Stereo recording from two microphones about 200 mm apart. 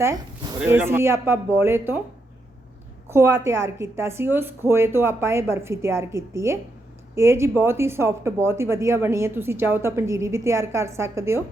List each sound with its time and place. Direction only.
0.0 s speech: 15° right (ahead or behind)
3.1 s speech: 15° right (ahead or behind)